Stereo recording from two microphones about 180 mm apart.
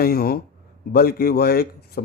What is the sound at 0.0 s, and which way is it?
Speech, 55° left (ahead or behind).